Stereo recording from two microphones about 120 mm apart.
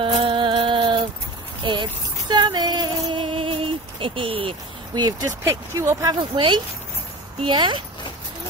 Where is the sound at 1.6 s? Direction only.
40° right (ahead or behind).